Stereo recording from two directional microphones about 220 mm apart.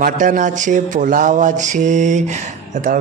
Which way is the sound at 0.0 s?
35° right (ahead or behind).